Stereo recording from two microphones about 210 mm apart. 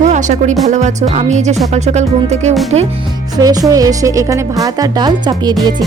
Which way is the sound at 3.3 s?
15° right (ahead or behind).